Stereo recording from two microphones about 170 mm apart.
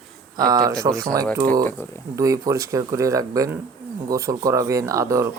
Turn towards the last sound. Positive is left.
turn(degrees=-20)  # may be behind; listen again after turning